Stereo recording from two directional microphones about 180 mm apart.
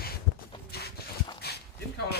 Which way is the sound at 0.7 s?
60° left (ahead or behind).